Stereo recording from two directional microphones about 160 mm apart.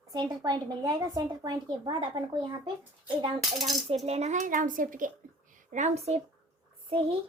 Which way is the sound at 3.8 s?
40° right (ahead or behind).